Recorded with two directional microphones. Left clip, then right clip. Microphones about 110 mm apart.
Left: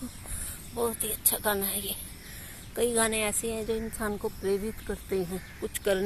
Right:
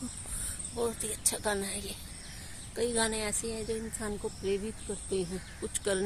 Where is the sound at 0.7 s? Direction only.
Centre (ahead or behind).